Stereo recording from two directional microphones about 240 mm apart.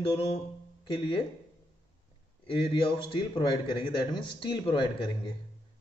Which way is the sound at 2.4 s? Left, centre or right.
Left.